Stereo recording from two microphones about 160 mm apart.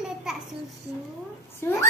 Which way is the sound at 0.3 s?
5° right (ahead or behind).